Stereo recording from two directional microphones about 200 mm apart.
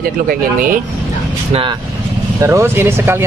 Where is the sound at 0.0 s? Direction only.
45° right (ahead or behind).